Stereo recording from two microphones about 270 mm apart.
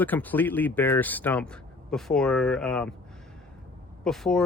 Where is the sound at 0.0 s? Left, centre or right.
Centre.